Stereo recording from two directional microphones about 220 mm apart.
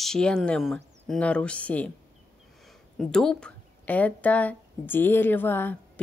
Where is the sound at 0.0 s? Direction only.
5° left (ahead or behind).